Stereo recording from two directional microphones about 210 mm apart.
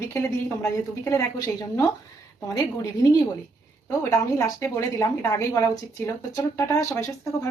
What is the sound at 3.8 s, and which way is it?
A woman's voice, 15° left (ahead or behind).